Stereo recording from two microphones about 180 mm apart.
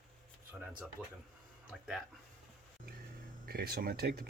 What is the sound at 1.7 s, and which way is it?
Speech, centre (ahead or behind).